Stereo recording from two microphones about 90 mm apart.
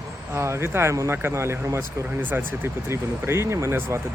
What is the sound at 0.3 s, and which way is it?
Speech, 30° right (ahead or behind).